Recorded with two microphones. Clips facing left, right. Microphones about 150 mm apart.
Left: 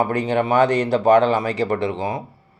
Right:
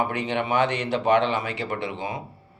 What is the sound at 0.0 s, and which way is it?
A man's voice, 40° left (ahead or behind).